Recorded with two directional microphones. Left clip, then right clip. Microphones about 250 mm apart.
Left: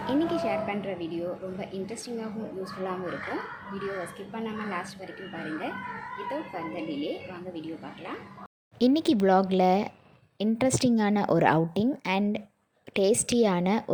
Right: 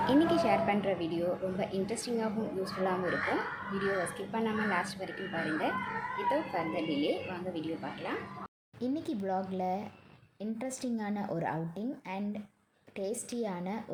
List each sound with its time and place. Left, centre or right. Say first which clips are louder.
0.0 s a woman's voice: even; centre
3.8 s a woman's voice: right 2 dB; centre
8.8 s a woman's voice: left 12 dB; left